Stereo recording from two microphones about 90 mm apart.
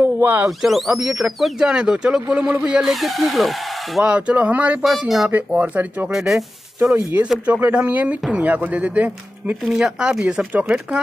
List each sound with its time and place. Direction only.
0.0 s a sound: 20° right (ahead or behind)
0.5 s speech: centre (ahead or behind)
4.0 s speech: 15° right (ahead or behind)
6.1 s speech: 5° right (ahead or behind)
6.9 s speech: 25° right (ahead or behind)
7.2 s speech: 15° right (ahead or behind)
9.7 s speech: 5° right (ahead or behind)